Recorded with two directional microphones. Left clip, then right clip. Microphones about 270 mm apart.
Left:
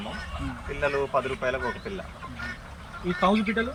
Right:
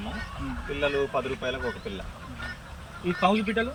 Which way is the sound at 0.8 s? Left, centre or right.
Centre.